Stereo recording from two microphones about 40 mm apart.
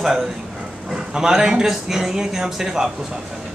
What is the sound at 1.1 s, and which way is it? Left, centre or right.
Speech, centre.